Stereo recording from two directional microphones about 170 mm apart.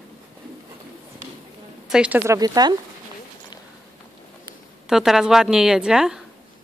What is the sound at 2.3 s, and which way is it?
Speech, 20° right (ahead or behind).